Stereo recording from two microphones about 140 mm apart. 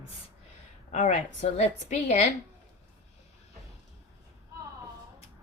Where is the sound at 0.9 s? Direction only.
60° left (ahead or behind).